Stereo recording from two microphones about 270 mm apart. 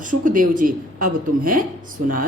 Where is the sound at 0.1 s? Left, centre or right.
Right.